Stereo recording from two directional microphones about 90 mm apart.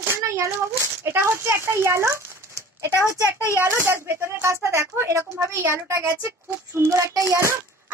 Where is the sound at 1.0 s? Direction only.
30° right (ahead or behind).